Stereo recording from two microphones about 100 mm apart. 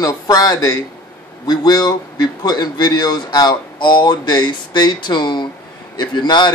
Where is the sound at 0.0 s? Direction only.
40° left (ahead or behind).